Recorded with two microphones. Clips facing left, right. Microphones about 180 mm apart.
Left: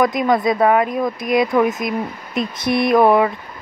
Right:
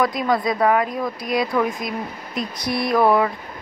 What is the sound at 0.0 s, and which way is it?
A woman's voice, 20° left (ahead or behind).